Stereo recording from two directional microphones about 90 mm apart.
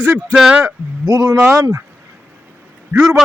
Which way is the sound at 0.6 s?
40° right (ahead or behind).